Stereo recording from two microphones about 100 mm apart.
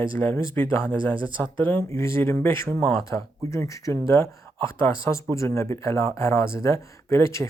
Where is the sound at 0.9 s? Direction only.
60° right (ahead or behind).